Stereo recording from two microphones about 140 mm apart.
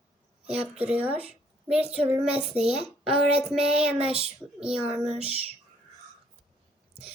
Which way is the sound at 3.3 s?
5° right (ahead or behind).